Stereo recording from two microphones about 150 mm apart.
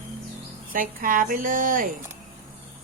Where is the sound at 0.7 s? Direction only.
70° right (ahead or behind).